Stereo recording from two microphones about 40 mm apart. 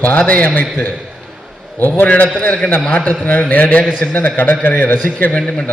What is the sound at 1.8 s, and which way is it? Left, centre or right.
Speech, left.